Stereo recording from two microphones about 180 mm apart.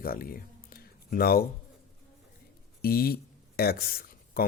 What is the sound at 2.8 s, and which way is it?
Speech, 55° left (ahead or behind).